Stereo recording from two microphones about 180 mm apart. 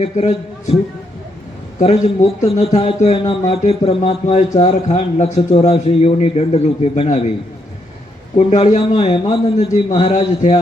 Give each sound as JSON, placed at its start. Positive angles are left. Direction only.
{"t": 0.0, "sound": "a man's voice", "side_deg": 35}
{"t": 1.8, "sound": "a man's voice", "side_deg": 35}
{"t": 8.4, "sound": "a man's voice", "side_deg": 35}
{"t": 9.1, "sound": "a man's voice", "side_deg": 25}